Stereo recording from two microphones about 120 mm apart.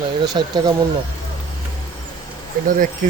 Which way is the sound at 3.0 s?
90° right.